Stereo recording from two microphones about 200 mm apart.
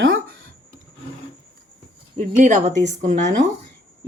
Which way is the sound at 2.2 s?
40° right (ahead or behind).